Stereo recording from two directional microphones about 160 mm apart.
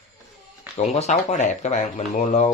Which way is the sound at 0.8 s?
45° left (ahead or behind).